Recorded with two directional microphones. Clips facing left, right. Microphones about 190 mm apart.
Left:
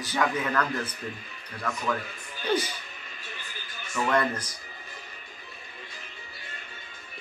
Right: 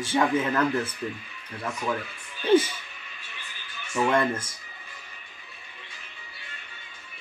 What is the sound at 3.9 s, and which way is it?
Speech, 25° right (ahead or behind).